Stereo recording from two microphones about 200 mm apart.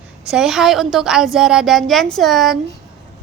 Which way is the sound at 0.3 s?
Centre (ahead or behind).